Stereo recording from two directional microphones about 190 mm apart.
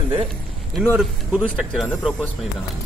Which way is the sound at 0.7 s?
Centre (ahead or behind).